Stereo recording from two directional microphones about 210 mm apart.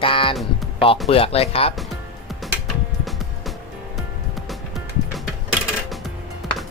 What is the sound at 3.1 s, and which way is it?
Music, centre (ahead or behind).